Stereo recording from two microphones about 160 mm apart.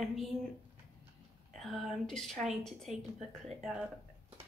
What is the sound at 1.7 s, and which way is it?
A woman's voice, 5° left (ahead or behind).